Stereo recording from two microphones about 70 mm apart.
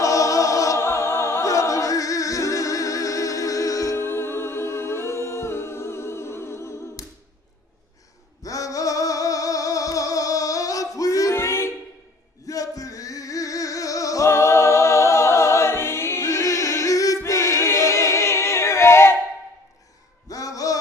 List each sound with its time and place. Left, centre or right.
0.0 s music: left
0.8 s music: left
1.4 s music: left
3.9 s humming: left
8.4 s music: left
11.3 s music: left
12.4 s music: left
17.2 s choir: left
20.2 s a sound: left